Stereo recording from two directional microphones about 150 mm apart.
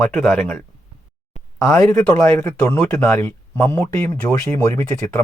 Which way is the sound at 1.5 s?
20° left (ahead or behind).